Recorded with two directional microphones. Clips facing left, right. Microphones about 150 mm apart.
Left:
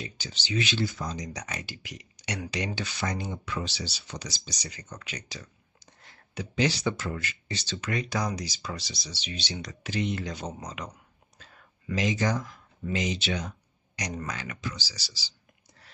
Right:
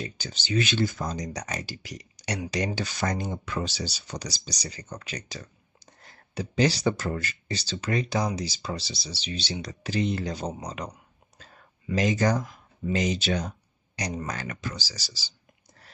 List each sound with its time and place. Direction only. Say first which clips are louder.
0.0 s speech: right 3 dB; 45° right (ahead or behind)
11.3 s a sound: right 2 dB; 40° right (ahead or behind)
12.9 s speech: right 4 dB; 45° right (ahead or behind)